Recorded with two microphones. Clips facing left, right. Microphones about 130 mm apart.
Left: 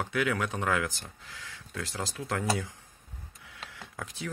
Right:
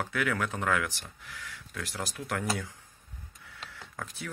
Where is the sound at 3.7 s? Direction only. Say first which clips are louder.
Even; 15° left (ahead or behind).